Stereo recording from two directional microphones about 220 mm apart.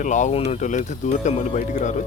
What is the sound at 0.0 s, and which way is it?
Speech, 35° left (ahead or behind).